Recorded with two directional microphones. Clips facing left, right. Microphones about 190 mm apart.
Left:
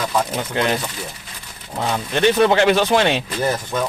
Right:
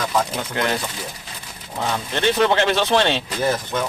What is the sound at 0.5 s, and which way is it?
Speech, 20° left (ahead or behind).